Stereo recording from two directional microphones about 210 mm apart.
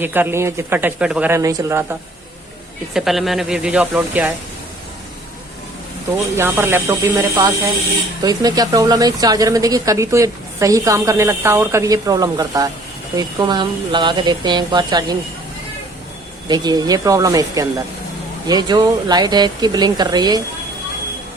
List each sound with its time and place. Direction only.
0.0 s speech: 10° right (ahead or behind)
2.9 s speech: centre (ahead or behind)
6.1 s speech: 10° right (ahead or behind)
16.5 s speech: 20° right (ahead or behind)